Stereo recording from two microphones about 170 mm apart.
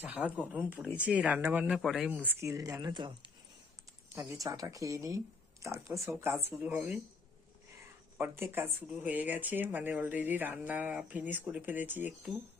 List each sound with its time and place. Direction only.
0.0 s speech: 5° right (ahead or behind)
8.2 s speech: 10° right (ahead or behind)